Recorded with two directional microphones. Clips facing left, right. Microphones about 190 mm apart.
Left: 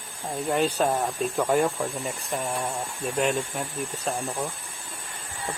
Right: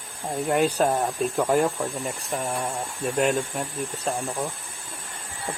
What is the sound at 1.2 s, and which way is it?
Speech, centre (ahead or behind).